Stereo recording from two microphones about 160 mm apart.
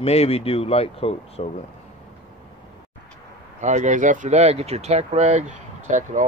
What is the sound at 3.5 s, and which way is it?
Speech, 50° right (ahead or behind).